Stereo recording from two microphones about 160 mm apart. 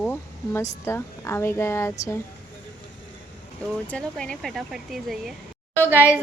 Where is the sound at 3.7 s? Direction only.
5° left (ahead or behind).